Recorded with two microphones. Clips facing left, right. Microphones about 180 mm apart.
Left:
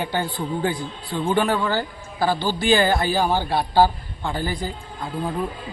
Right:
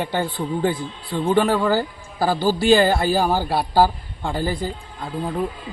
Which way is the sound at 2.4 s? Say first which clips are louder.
Right 5 dB; 40° right (ahead or behind).